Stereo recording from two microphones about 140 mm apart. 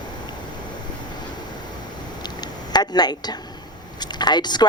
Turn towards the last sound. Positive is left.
turn(degrees=30)  # may be behind; listen again after turning